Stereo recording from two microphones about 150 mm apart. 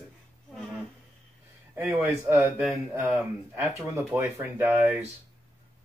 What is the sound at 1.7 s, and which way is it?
Speech, 15° right (ahead or behind).